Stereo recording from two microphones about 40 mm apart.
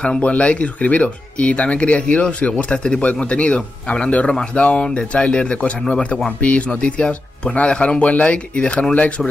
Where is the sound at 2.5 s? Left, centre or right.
Left.